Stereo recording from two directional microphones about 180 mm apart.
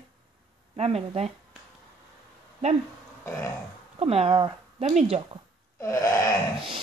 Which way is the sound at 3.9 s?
35° right (ahead or behind).